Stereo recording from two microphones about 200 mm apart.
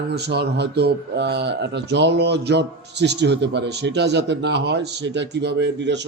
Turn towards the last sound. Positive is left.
turn(degrees=-60)  # may be behind; listen again after turning